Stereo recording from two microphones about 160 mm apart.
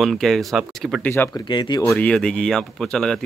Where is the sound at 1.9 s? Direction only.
5° left (ahead or behind).